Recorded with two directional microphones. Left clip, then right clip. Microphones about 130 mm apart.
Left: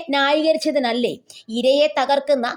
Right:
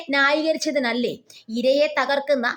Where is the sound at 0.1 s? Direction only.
30° left (ahead or behind).